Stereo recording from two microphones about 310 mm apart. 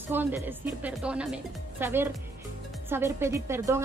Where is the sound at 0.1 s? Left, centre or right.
Centre.